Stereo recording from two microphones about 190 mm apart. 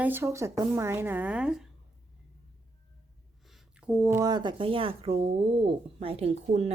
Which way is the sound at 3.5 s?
5° right (ahead or behind).